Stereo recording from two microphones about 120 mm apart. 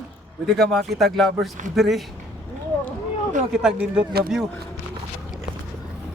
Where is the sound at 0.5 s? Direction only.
Centre (ahead or behind).